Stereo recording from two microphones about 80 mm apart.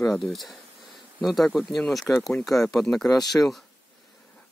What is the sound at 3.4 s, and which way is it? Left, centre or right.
Speech, left.